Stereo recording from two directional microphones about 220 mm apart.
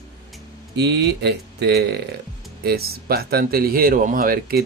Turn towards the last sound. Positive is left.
turn(degrees=-45)  # may be behind; listen again after turning